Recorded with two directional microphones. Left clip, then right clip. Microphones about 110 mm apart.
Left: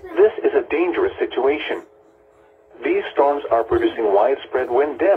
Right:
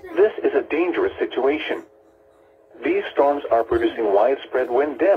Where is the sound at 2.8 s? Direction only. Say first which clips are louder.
Left 1 dB; 25° right (ahead or behind).